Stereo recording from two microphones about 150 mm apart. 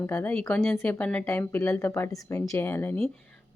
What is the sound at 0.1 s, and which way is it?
A woman's voice, 10° left (ahead or behind).